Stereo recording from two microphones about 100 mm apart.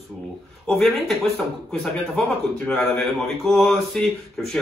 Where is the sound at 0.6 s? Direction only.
Centre (ahead or behind).